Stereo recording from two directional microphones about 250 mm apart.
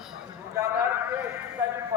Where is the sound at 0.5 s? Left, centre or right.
Centre.